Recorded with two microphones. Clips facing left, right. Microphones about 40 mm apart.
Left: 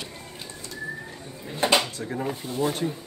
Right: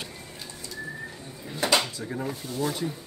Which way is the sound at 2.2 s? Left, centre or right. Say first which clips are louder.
Left 3 dB; left.